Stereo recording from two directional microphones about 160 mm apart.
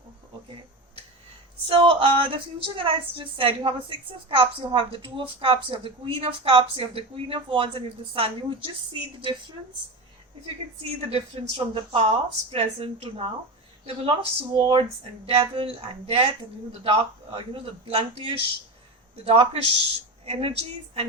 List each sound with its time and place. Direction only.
1.6 s speech: 30° right (ahead or behind)
11.1 s speech: 35° right (ahead or behind)
16.8 s speech: 35° right (ahead or behind)